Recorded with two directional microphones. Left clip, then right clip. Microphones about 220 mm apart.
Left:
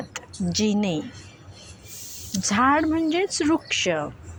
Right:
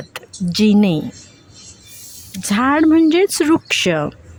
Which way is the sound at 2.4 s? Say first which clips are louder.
Right 4 dB; 45° right (ahead or behind).